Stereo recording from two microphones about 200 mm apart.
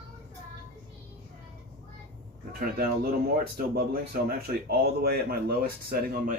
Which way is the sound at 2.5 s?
50° right (ahead or behind).